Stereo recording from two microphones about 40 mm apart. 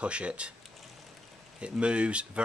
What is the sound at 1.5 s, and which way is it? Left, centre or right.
Speech, right.